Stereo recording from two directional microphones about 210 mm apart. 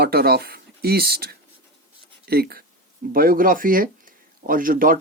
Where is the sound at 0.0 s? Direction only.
45° right (ahead or behind).